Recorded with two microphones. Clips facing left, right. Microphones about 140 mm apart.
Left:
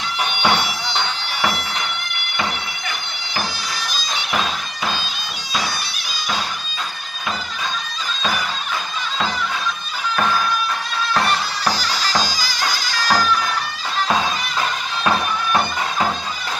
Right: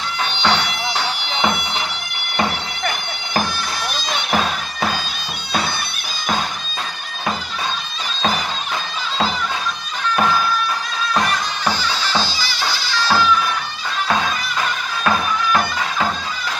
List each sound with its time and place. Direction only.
0.4 s bagpipes: 10° left (ahead or behind)
1.2 s bagpipes: 20° right (ahead or behind)
3.9 s bagpipes: 60° right (ahead or behind)
11.2 s music: 35° left (ahead or behind)
12.0 s bagpipes: 40° left (ahead or behind)